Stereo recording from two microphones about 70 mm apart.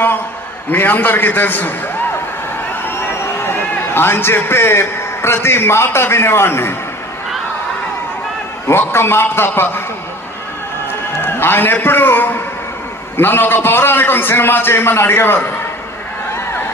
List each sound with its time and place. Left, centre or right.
0.7 s a man's voice: left
2.8 s a man's voice: left
8.6 s a man's voice: left
11.1 s a man's voice: left